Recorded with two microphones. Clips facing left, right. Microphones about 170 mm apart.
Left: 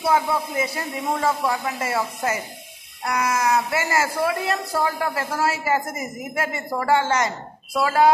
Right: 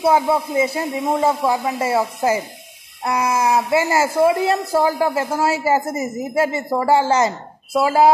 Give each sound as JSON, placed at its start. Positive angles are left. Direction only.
{"t": 0.0, "sound": "speech", "side_deg": -25}